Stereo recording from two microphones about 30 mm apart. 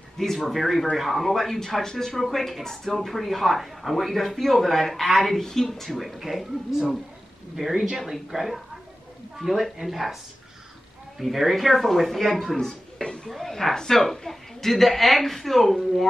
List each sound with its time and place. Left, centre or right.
0.5 s a woman's voice: centre
2.2 s a woman's voice: centre
8.1 s speech: centre
11.1 s speech: centre
12.5 s a sound: left
13.3 s a woman's voice: centre